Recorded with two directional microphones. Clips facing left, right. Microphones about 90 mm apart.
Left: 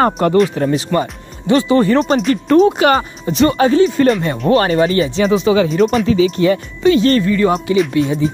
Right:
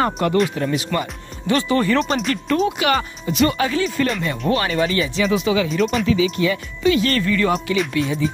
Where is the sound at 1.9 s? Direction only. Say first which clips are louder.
Left 6 dB; 40° left (ahead or behind).